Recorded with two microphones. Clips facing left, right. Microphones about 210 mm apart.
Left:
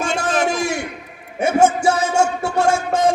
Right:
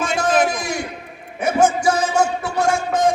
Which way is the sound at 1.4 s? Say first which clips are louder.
Left 2 dB; 25° left (ahead or behind).